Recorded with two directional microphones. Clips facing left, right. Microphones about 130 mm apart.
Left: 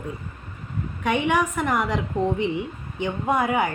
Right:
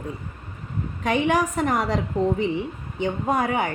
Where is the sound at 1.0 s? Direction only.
35° right (ahead or behind).